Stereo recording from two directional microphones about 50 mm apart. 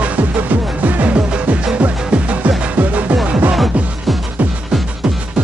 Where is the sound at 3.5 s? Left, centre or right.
Centre.